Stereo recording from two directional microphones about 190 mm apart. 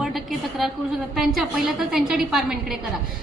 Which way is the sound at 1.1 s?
Centre (ahead or behind).